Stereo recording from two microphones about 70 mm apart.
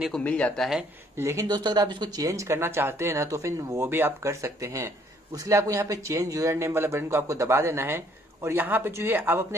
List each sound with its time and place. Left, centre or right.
0.2 s speech: centre
1.1 s speech: right
1.5 s speech: right
2.1 s speech: right
5.3 s speech: right